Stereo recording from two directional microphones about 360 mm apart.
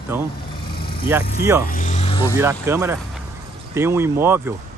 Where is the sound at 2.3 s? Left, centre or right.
Centre.